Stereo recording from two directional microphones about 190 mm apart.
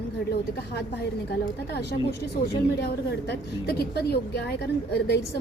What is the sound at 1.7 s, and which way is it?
A woman's voice, 60° left (ahead or behind).